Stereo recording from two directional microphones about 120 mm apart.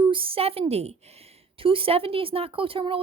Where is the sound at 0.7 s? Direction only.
60° right (ahead or behind).